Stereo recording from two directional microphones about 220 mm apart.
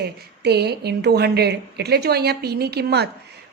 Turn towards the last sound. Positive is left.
turn(degrees=-45)  # may be behind; listen again after turning